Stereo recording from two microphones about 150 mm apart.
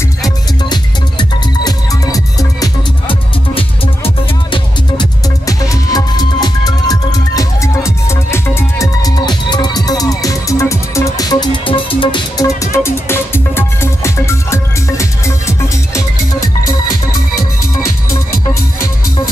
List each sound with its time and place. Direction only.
0.2 s music: 30° left (ahead or behind)
3.1 s music: 35° left (ahead or behind)
5.5 s music: 25° left (ahead or behind)
12.7 s music: 15° left (ahead or behind)
18.5 s music: 20° left (ahead or behind)